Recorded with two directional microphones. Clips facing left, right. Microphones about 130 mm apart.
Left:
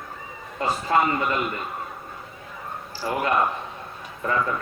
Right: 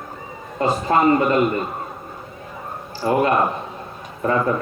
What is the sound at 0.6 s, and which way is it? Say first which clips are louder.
Speech: right 4 dB; 40° right (ahead or behind).